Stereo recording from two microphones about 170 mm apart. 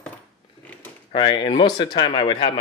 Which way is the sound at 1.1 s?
30° left (ahead or behind).